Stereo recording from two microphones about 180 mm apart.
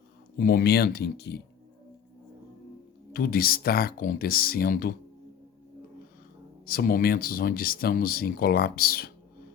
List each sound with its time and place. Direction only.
0.3 s speech: 55° left (ahead or behind)
3.1 s speech: 55° left (ahead or behind)
6.7 s speech: 55° left (ahead or behind)